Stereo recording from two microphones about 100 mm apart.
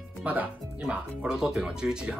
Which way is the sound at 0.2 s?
15° right (ahead or behind).